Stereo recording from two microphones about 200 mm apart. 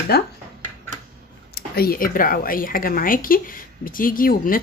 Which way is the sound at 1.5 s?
50° left (ahead or behind).